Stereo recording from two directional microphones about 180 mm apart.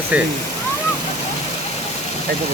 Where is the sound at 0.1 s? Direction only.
5° right (ahead or behind).